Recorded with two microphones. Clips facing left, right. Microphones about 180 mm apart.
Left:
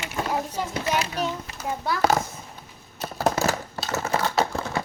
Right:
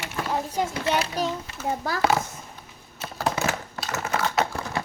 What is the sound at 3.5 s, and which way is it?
Typing, 30° left (ahead or behind).